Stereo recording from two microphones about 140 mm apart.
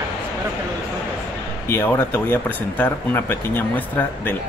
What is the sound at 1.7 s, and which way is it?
Speech, 15° left (ahead or behind).